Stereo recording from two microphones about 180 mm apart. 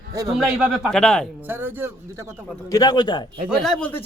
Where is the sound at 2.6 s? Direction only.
20° left (ahead or behind).